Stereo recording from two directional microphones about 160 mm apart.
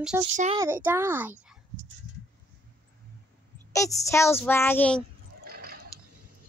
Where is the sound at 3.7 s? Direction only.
20° left (ahead or behind).